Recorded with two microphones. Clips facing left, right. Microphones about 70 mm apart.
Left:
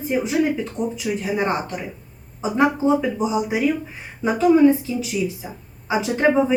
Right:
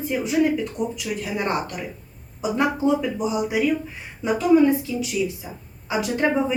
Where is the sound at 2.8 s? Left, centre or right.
Centre.